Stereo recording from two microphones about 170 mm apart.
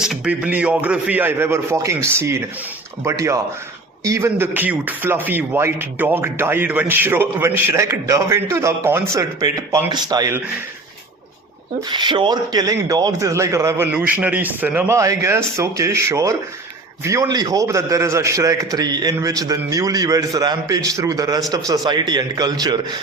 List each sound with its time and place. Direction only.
0.0 s speech: 5° right (ahead or behind); by 10.4 s 20° right (ahead or behind)
11.9 s a man's voice: 25° right (ahead or behind)